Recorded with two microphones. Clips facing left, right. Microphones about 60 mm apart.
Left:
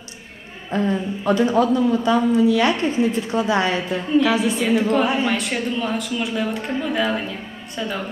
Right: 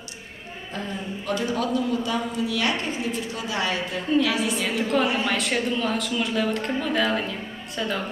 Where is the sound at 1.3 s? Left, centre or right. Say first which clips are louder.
Left 8 dB; left.